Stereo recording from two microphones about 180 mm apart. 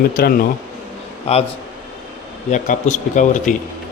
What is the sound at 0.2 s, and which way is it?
Speech, 55° left (ahead or behind).